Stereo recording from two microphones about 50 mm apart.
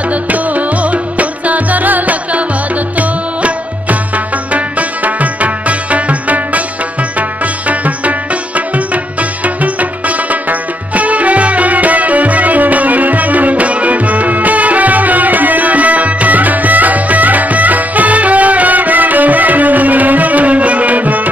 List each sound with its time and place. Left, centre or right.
0.1 s music: right